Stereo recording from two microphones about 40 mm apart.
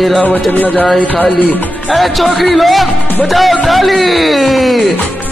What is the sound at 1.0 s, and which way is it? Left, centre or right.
Music, left.